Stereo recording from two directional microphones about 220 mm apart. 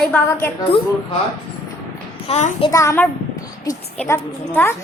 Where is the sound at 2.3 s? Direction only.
30° left (ahead or behind).